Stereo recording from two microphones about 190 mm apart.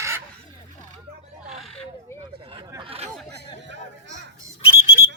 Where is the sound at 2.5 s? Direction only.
25° right (ahead or behind).